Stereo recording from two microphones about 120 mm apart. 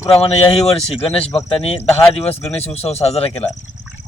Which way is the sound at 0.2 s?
55° left (ahead or behind).